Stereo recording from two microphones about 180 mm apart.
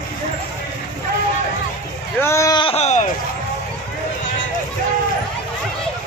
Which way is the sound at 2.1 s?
15° left (ahead or behind).